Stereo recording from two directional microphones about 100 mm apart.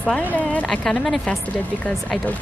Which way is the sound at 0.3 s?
15° left (ahead or behind).